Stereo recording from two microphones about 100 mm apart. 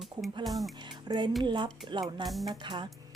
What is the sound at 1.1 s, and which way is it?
A woman's voice, 45° right (ahead or behind).